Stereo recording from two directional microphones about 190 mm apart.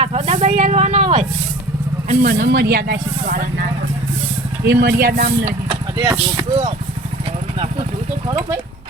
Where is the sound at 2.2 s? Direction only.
60° right (ahead or behind).